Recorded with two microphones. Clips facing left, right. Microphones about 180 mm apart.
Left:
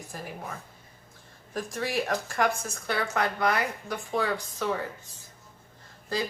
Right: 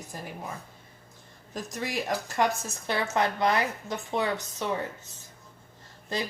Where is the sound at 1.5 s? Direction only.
20° right (ahead or behind).